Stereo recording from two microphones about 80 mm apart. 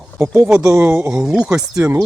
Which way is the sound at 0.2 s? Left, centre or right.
Right.